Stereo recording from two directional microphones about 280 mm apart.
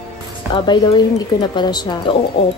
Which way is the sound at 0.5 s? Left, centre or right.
Centre.